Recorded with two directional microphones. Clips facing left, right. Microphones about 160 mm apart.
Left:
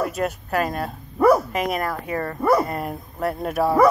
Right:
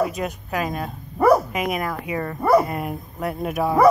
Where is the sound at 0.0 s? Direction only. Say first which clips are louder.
Even; centre (ahead or behind).